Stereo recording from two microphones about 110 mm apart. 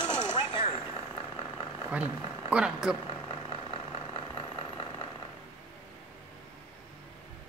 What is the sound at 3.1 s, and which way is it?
Vehicle, 45° left (ahead or behind).